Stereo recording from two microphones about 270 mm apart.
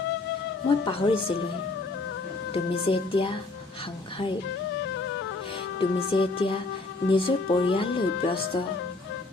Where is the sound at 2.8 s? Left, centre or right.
Centre.